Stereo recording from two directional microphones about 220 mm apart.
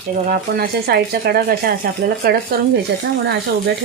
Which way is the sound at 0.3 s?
45° right (ahead or behind).